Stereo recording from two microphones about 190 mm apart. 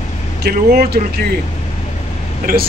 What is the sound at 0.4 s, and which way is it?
Speech, 55° right (ahead or behind).